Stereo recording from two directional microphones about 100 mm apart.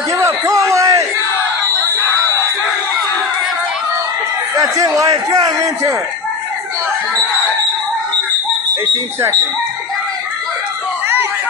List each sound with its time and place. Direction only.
0.1 s a sound: 35° right (ahead or behind)
0.7 s battle cry: 35° right (ahead or behind)
4.6 s a man's voice: 40° right (ahead or behind)